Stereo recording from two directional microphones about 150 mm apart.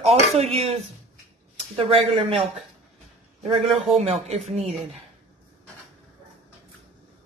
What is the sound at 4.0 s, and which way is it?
Speech, 45° right (ahead or behind).